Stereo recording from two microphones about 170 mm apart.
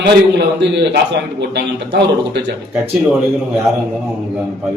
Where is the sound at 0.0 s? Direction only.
85° right.